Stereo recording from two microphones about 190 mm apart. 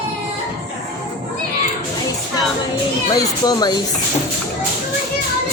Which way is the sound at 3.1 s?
20° left (ahead or behind).